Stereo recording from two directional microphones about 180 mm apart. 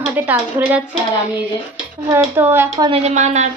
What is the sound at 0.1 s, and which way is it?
Speech, 10° right (ahead or behind).